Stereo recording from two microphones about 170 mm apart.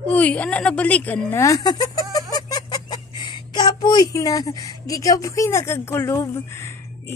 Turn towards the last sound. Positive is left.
turn(degrees=15)  # may be behind; listen again after turning